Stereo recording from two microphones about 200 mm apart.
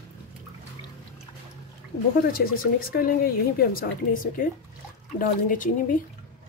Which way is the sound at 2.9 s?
50° left (ahead or behind).